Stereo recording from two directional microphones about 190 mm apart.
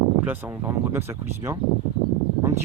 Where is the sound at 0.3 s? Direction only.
10° right (ahead or behind).